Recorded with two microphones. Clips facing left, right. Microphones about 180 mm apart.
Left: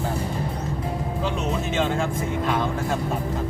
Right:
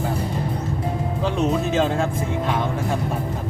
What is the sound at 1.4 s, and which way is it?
Speech, 35° right (ahead or behind).